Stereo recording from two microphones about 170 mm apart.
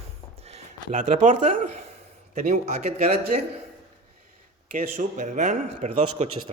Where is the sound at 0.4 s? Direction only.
40° right (ahead or behind).